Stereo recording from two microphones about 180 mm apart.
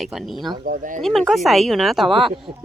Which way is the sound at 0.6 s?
45° right (ahead or behind).